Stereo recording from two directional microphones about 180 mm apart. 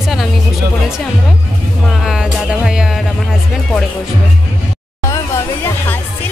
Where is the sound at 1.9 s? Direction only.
Centre (ahead or behind).